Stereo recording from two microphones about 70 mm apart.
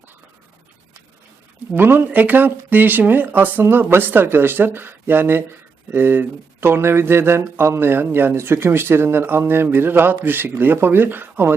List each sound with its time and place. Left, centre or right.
1.7 s speech: right